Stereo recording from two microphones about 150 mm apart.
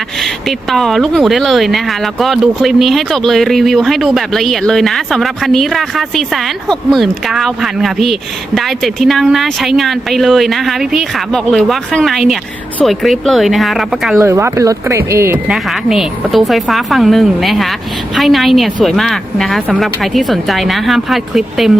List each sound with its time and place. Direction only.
0.2 s speech: centre (ahead or behind)
14.2 s speech: 20° right (ahead or behind)
15.4 s speech: centre (ahead or behind)